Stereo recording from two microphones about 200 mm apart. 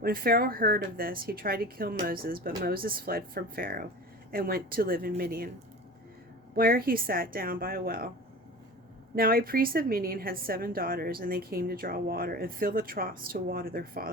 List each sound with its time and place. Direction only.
0.0 s a woman's voice: 45° right (ahead or behind)
6.6 s a woman's voice: 45° right (ahead or behind)
9.1 s a woman's voice: 45° right (ahead or behind)